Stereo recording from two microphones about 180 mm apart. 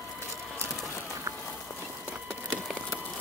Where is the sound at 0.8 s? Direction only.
15° left (ahead or behind).